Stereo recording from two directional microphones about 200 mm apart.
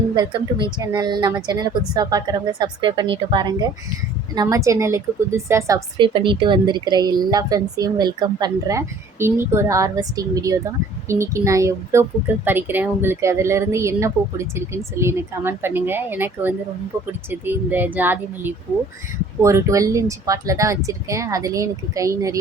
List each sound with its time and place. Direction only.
0.2 s a woman's voice: 25° right (ahead or behind)
4.4 s a woman's voice: 15° right (ahead or behind)